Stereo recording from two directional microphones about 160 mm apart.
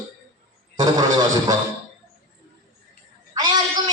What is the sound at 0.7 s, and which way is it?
Speech, 25° right (ahead or behind).